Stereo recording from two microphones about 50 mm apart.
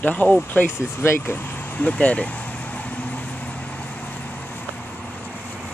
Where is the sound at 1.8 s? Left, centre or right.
Left.